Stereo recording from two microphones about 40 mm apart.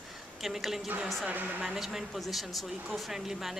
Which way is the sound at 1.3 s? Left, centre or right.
Right.